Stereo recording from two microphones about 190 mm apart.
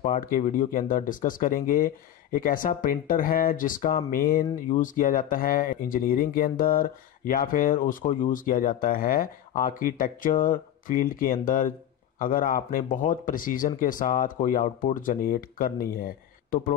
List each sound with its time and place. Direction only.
0.0 s speech: 45° left (ahead or behind)